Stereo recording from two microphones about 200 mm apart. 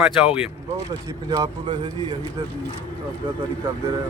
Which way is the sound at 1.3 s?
20° right (ahead or behind).